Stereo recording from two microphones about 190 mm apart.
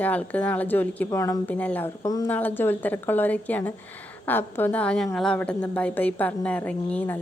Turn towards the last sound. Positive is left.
turn(degrees=10)  # may be behind; listen again after turning